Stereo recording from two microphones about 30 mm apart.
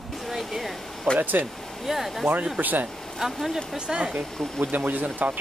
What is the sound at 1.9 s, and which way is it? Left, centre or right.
Speech, centre.